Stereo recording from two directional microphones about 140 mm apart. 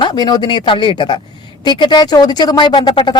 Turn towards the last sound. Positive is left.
turn(degrees=35)  # may be behind; listen again after turning